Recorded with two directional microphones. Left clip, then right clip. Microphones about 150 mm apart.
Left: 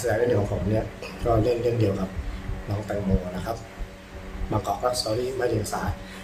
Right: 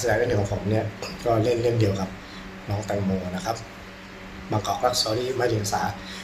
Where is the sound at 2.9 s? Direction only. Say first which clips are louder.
Right 2 dB; 10° left (ahead or behind).